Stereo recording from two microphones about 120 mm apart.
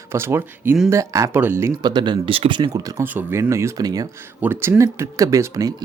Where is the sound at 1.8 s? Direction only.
40° right (ahead or behind).